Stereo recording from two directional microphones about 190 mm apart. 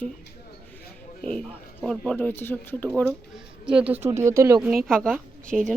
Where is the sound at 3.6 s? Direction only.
5° right (ahead or behind).